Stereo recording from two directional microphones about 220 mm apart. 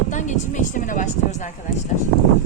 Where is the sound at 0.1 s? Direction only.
35° left (ahead or behind).